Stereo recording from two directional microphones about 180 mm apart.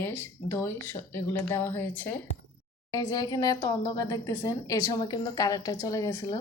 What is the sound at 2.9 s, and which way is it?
A woman's voice, 20° left (ahead or behind).